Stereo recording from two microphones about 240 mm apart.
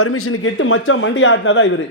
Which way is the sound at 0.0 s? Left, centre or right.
Left.